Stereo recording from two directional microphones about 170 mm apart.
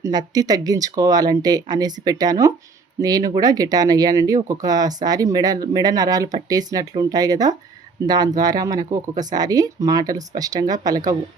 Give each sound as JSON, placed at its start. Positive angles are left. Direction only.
{"t": 0.0, "sound": "speech", "side_deg": -25}